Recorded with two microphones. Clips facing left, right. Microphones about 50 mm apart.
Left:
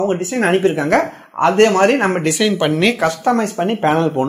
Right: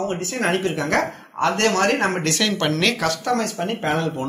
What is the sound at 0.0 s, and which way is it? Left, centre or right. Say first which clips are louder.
Speech: left 7 dB; left.